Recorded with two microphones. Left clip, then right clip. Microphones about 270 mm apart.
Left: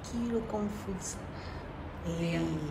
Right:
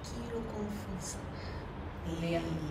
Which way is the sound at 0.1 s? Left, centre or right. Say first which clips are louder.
Left 7 dB; centre.